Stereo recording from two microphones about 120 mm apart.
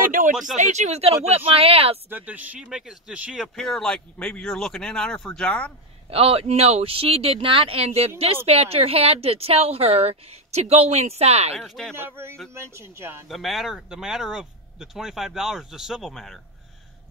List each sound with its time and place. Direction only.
0.3 s speech: 5° right (ahead or behind)
0.6 s speech: 75° right (ahead or behind); by 2.0 s 55° right (ahead or behind)
2.0 s speech: 15° right (ahead or behind)
3.5 s speech: 5° left (ahead or behind)
6.0 s speech: 55° right (ahead or behind)
11.5 s speech: centre (ahead or behind)
12.2 s speech: 20° right (ahead or behind)
13.3 s speech: centre (ahead or behind)